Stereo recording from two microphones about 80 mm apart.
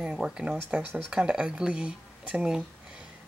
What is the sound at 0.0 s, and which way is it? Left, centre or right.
Speech, centre.